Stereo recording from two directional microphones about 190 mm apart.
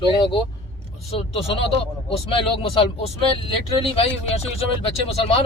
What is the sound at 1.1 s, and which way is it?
A man's voice, 30° left (ahead or behind).